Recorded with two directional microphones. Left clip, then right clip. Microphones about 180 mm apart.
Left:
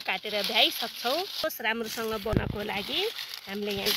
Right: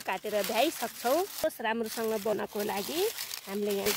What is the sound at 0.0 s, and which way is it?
Speech, 40° right (ahead or behind).